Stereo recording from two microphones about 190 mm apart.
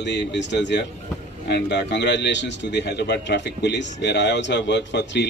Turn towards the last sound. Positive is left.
turn(degrees=65)  # may be behind; listen again after turning